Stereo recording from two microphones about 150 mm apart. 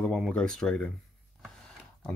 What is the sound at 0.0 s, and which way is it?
Speech, 5° left (ahead or behind).